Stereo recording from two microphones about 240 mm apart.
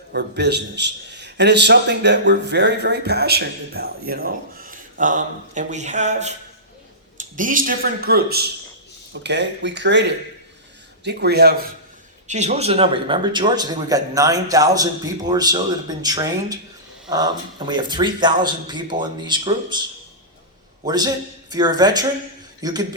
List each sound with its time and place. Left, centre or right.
0.1 s a man's voice: right
12.3 s a man's voice: right
20.8 s a man's voice: centre